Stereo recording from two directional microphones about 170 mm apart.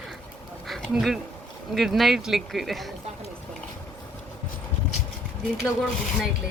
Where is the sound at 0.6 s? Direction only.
Centre (ahead or behind).